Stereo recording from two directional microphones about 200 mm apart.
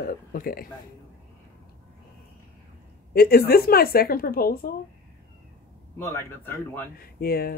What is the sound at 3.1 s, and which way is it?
A woman's voice, 50° left (ahead or behind).